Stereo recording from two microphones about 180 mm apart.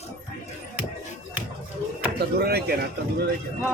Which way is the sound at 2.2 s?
60° right (ahead or behind).